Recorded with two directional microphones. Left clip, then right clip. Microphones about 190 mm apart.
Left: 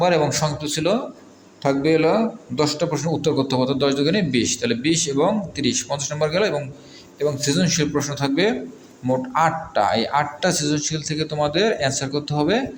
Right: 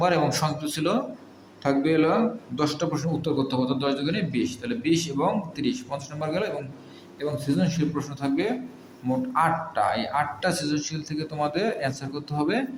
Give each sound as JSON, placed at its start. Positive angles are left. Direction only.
{"t": 0.0, "sound": "a man's voice", "side_deg": 15}